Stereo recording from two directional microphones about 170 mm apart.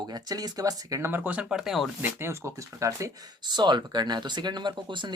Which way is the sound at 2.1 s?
15° right (ahead or behind).